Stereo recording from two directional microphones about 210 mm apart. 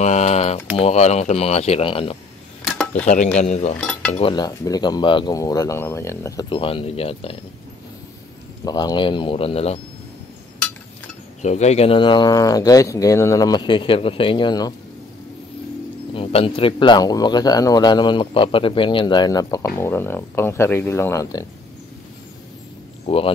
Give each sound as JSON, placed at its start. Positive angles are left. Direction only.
{"t": 0.0, "sound": "typing", "side_deg": 35}
{"t": 0.7, "sound": "speech", "side_deg": 30}
{"t": 3.3, "sound": "speech", "side_deg": 30}
{"t": 8.6, "sound": "speech", "side_deg": 20}
{"t": 11.4, "sound": "speech", "side_deg": 35}
{"t": 16.2, "sound": "speech", "side_deg": 25}
{"t": 23.0, "sound": "speech", "side_deg": 25}